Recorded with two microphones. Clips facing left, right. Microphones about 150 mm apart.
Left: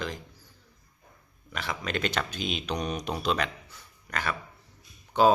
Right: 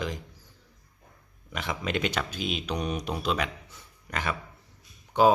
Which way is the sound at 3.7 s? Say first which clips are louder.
Even; 20° right (ahead or behind).